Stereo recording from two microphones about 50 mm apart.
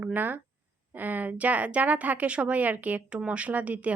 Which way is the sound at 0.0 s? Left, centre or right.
Right.